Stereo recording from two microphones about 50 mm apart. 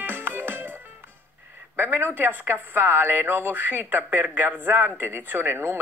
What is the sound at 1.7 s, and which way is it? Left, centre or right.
Speech, right.